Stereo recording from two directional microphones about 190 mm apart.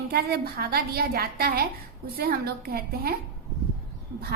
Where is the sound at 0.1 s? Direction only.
55° right (ahead or behind).